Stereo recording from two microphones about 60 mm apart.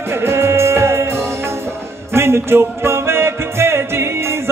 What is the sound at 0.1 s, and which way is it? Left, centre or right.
Music, right.